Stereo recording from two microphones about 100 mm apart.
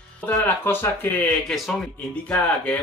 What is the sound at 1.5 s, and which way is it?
Speech, centre (ahead or behind).